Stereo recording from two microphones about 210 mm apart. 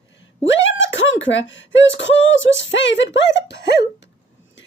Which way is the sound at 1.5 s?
60° left (ahead or behind).